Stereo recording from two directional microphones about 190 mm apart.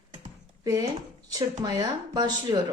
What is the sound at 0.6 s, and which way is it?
Speech, 20° right (ahead or behind).